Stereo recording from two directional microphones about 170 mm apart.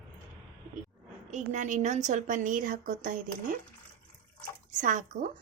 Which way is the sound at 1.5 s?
45° right (ahead or behind).